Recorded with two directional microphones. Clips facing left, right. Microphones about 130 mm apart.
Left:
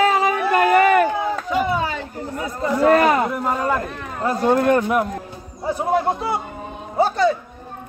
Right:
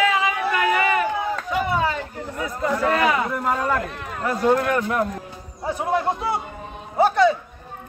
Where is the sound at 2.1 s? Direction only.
35° left (ahead or behind).